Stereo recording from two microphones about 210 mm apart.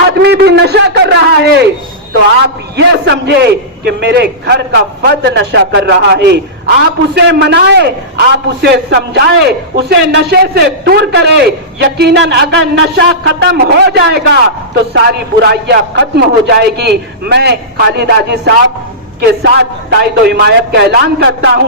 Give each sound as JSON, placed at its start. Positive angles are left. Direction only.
{"t": 0.1, "sound": "a man's voice", "side_deg": -50}
{"t": 2.7, "sound": "a man's voice", "side_deg": -50}